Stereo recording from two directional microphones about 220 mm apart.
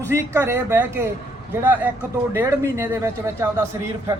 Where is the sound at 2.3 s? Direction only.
15° right (ahead or behind).